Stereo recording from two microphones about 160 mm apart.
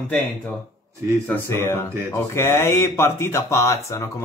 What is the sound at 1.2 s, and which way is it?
Speech, 15° left (ahead or behind).